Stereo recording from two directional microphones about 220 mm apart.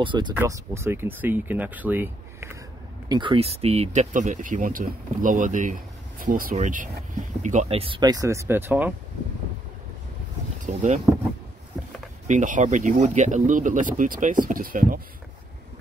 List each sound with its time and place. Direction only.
0.0 s speech: 20° right (ahead or behind)
3.1 s speech: 20° right (ahead or behind)
10.6 s speech: 35° right (ahead or behind)
12.3 s speech: 35° right (ahead or behind)